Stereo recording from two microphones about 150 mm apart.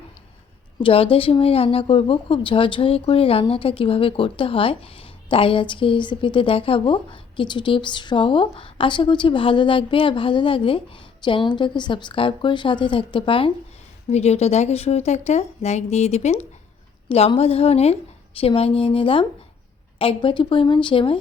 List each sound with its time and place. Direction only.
0.8 s speech: 35° left (ahead or behind)
14.1 s speech: 45° left (ahead or behind)